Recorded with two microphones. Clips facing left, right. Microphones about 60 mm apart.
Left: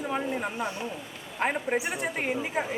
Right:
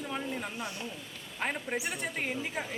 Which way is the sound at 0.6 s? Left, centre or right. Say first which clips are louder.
Left 6 dB; centre.